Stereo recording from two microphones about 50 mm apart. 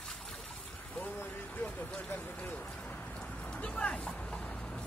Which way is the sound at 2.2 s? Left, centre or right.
Left.